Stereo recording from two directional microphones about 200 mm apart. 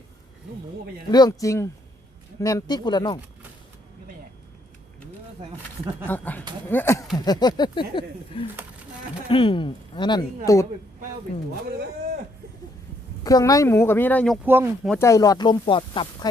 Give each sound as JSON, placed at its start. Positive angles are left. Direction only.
{"t": 1.1, "sound": "speech", "side_deg": 20}
{"t": 6.1, "sound": "speech", "side_deg": 10}
{"t": 13.2, "sound": "speech", "side_deg": 15}
{"t": 14.4, "sound": "speech", "side_deg": -10}
{"t": 14.8, "sound": "speech", "side_deg": 15}